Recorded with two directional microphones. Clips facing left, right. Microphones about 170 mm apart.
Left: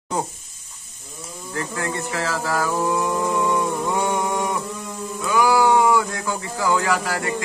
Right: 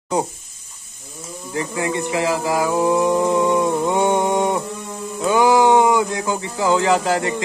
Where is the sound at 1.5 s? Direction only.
15° right (ahead or behind).